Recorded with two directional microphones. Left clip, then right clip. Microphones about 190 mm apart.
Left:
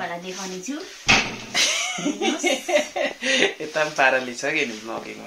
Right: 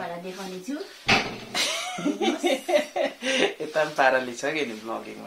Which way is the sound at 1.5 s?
Centre (ahead or behind).